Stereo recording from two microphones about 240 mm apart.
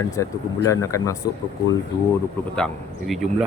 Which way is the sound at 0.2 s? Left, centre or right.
Centre.